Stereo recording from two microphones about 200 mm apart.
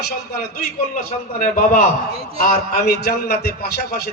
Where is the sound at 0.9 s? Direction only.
40° left (ahead or behind).